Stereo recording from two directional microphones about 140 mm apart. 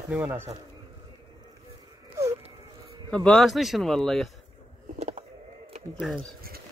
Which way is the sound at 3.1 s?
5° left (ahead or behind).